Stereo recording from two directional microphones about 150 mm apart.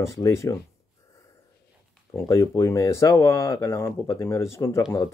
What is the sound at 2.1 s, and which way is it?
Speech, 20° left (ahead or behind).